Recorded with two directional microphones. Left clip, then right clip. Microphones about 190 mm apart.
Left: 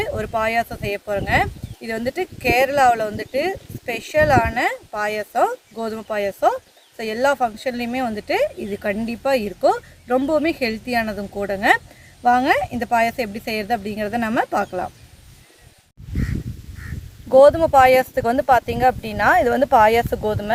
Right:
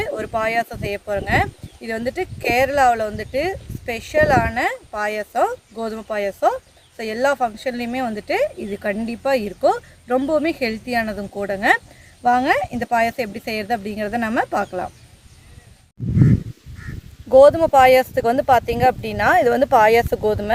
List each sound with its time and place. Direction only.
0.0 s speech: centre (ahead or behind)
17.2 s speech: 35° right (ahead or behind)